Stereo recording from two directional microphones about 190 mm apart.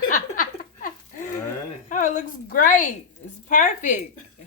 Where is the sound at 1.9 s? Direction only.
45° left (ahead or behind).